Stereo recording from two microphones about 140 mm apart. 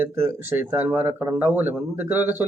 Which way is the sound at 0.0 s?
15° right (ahead or behind).